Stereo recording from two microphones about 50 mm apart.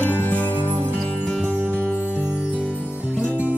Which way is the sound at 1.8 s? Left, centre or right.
Left.